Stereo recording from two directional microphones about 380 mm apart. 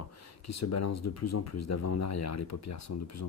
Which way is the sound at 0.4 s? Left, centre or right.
Left.